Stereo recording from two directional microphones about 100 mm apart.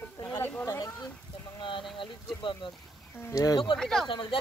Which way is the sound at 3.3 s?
40° left (ahead or behind).